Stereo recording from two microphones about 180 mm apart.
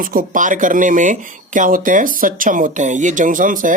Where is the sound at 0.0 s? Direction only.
50° right (ahead or behind).